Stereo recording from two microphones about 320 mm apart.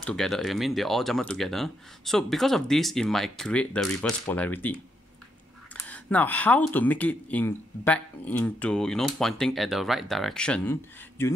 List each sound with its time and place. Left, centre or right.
0.0 s speech: centre
5.9 s speech: centre